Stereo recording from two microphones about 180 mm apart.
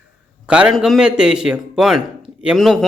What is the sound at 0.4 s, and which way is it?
A man's voice, 5° right (ahead or behind).